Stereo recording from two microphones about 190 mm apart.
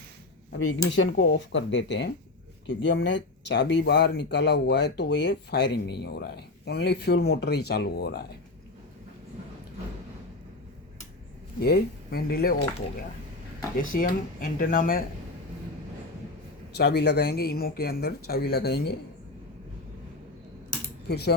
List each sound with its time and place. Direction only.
0.9 s speech: 65° left (ahead or behind)
11.6 s speech: 55° left (ahead or behind)
13.7 s speech: 45° left (ahead or behind)
16.7 s speech: 60° left (ahead or behind)
21.1 s speech: 55° left (ahead or behind)